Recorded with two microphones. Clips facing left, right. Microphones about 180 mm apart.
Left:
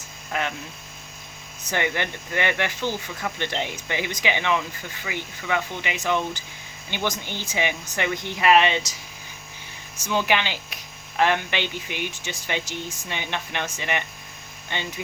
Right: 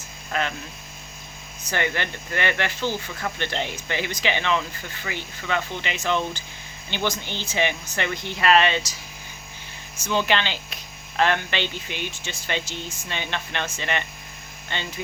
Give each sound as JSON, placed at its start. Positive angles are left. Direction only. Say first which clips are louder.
{"t": 0.3, "sound": "speech", "louder": "right 1 dB", "side_deg": 15}
{"t": 1.7, "sound": "speech", "louder": "left 1 dB", "side_deg": 15}
{"t": 10.0, "sound": "speech", "louder": "even", "side_deg": 10}